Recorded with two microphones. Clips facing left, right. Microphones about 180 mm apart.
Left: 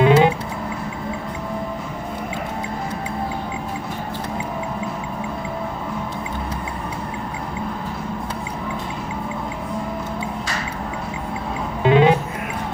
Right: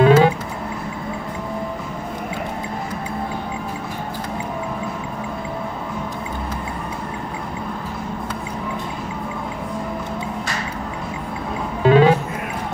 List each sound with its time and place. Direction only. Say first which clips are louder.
0.0 s music: right 1 dB; 20° left (ahead or behind)
11.8 s music: right 1 dB; 20° left (ahead or behind)